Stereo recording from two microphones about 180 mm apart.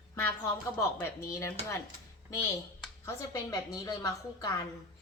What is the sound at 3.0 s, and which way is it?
A woman's voice, 20° left (ahead or behind).